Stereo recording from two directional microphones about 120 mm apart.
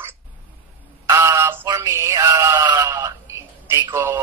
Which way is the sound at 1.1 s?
20° right (ahead or behind).